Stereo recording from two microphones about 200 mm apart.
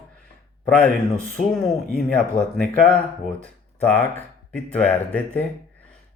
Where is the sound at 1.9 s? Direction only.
5° left (ahead or behind).